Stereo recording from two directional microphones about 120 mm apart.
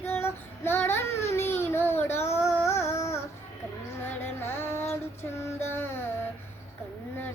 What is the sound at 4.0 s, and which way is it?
Music, 20° left (ahead or behind).